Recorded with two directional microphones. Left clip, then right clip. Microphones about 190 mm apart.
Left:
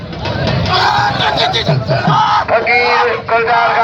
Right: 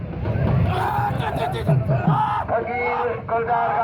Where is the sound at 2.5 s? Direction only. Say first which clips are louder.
Left 11 dB; 25° left (ahead or behind).